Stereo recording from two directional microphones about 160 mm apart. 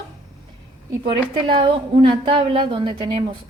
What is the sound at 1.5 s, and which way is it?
A woman's voice, 35° right (ahead or behind).